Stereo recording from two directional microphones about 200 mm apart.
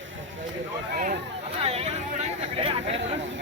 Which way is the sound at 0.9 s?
40° right (ahead or behind).